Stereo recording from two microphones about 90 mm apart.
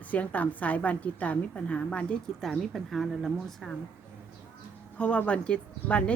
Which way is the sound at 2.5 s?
Centre (ahead or behind).